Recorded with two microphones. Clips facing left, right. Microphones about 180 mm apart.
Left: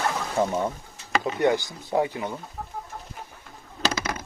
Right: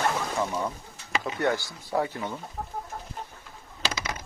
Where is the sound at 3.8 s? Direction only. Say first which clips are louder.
Left 5 dB; 50° left (ahead or behind).